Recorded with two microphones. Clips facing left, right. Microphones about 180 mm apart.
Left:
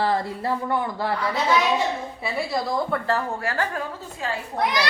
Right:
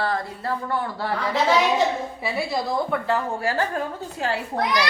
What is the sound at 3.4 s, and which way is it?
Speech, 35° right (ahead or behind).